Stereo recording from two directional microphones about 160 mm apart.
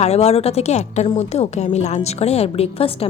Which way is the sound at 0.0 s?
40° left (ahead or behind).